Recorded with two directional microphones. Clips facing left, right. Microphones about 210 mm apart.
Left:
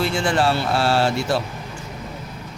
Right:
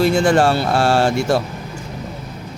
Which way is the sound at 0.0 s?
40° right (ahead or behind).